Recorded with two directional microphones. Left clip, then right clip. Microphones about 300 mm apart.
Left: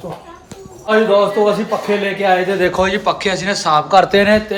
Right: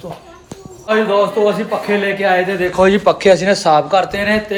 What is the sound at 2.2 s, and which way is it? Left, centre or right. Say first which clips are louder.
A man's voice: left 3 dB; centre.